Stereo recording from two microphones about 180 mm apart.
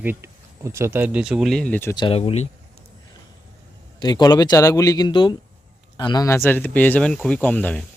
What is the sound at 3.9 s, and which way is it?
A man's voice, 20° left (ahead or behind).